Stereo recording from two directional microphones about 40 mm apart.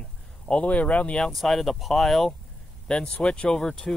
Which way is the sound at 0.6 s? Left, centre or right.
Left.